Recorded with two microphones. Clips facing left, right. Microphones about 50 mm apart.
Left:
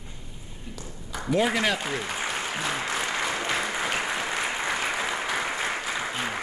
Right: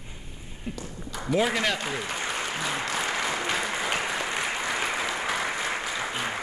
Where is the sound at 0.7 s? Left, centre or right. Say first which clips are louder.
Right 6 dB; right.